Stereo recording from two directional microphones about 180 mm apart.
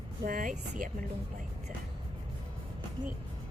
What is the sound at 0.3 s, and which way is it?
Speech, 50° right (ahead or behind).